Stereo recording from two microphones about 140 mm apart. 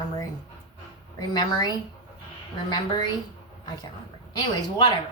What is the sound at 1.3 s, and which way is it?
A woman's voice, 30° left (ahead or behind).